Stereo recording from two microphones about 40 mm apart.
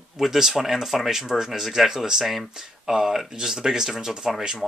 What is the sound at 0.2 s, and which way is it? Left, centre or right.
Speech, centre.